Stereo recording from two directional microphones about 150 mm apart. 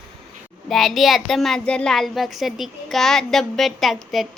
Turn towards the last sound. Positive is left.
turn(degrees=0)  # may be behind; listen again after turning